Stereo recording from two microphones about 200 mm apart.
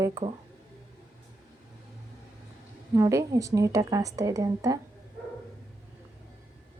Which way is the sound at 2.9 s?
15° right (ahead or behind).